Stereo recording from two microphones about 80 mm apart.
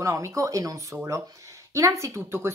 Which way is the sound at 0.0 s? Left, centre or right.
Right.